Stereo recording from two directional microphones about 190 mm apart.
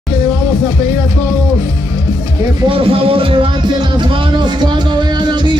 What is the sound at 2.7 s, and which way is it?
Music, 30° right (ahead or behind).